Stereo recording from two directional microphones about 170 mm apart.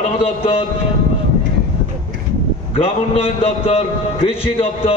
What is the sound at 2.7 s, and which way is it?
A man's voice, 35° left (ahead or behind).